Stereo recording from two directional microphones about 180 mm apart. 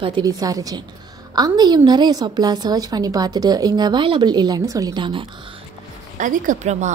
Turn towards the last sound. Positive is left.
turn(degrees=-40)  # may be behind; listen again after turning